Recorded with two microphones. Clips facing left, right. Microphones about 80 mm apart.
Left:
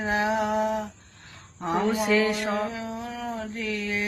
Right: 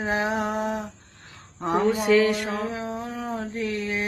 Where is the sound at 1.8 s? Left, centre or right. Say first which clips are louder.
Right 4 dB; centre.